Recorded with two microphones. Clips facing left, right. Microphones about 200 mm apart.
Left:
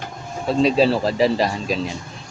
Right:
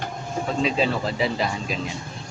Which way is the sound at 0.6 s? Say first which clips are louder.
Left 8 dB; 35° left (ahead or behind).